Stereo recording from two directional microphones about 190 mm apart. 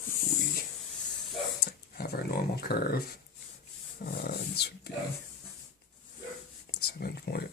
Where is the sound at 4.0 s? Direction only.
55° left (ahead or behind).